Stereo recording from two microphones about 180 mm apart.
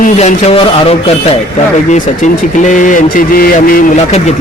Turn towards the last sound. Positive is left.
turn(degrees=40)  # may be behind; listen again after turning